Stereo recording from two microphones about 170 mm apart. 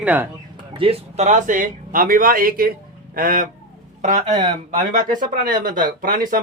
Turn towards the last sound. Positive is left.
turn(degrees=-55)  # may be behind; listen again after turning